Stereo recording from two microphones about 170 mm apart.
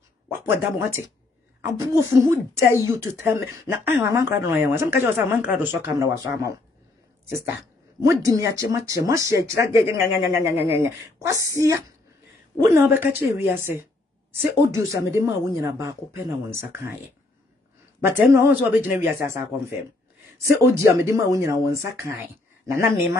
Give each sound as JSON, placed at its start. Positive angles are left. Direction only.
{"t": 0.3, "sound": "a woman's voice", "side_deg": -15}
{"t": 18.0, "sound": "a woman's voice", "side_deg": -15}